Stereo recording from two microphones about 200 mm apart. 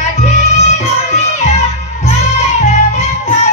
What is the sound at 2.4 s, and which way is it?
Music, 35° left (ahead or behind).